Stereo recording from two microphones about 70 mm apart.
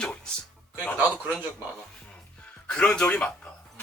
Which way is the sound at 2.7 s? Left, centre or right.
Centre.